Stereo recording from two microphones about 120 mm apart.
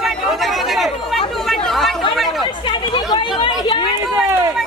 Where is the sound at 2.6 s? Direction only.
45° left (ahead or behind).